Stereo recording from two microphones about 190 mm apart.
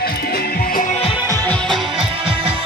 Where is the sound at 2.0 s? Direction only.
30° right (ahead or behind).